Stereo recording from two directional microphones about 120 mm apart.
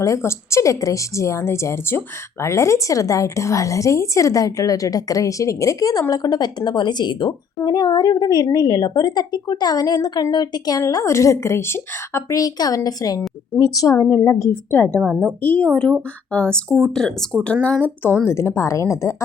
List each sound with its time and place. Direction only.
0.0 s a woman's voice: 25° left (ahead or behind)
15.1 s a woman's voice: 5° right (ahead or behind)
15.4 s a woman's voice: 15° left (ahead or behind)